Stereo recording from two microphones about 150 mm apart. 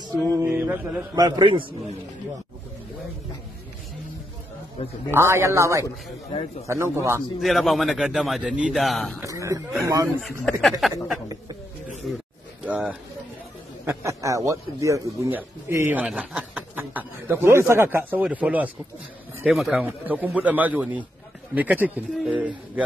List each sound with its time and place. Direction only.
0.0 s music: 20° right (ahead or behind)
1.1 s a man's voice: 25° right (ahead or behind)
4.8 s a man's voice: 40° left (ahead or behind)
5.1 s a man's voice: 20° right (ahead or behind)
7.4 s a man's voice: centre (ahead or behind)
9.2 s a man's voice: 20° right (ahead or behind)
10.4 s a man's voice: centre (ahead or behind)
13.8 s a man's voice: 20° right (ahead or behind)